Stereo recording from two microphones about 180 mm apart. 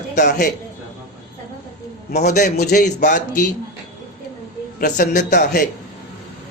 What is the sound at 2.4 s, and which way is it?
A man's voice, 45° left (ahead or behind).